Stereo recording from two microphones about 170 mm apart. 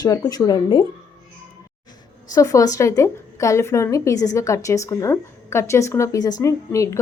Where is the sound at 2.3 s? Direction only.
20° left (ahead or behind).